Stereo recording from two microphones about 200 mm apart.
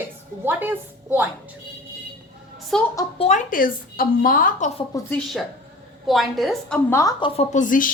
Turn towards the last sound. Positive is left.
turn(degrees=40)  # may be behind; listen again after turning